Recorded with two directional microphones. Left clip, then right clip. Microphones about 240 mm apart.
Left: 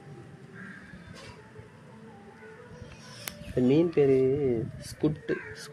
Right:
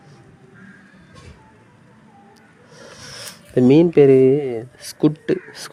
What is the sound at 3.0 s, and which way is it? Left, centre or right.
Speech, right.